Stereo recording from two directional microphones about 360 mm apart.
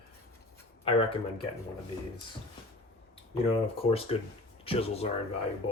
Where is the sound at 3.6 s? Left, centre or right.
Centre.